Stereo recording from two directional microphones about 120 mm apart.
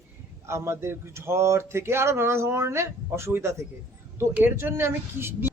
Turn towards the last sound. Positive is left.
turn(degrees=-20)  # may be behind; listen again after turning